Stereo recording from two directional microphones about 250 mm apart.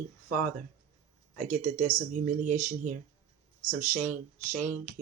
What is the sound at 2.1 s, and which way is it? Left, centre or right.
Speech, right.